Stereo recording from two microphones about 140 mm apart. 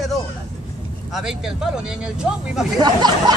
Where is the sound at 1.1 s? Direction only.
5° right (ahead or behind).